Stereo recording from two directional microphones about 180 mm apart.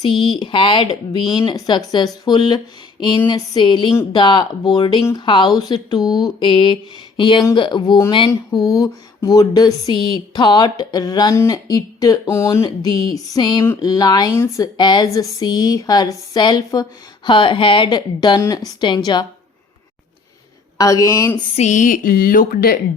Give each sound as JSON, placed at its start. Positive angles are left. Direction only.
{"t": 0.0, "sound": "speech", "side_deg": 25}
{"t": 20.7, "sound": "speech", "side_deg": 20}
{"t": 21.5, "sound": "a woman's voice", "side_deg": 40}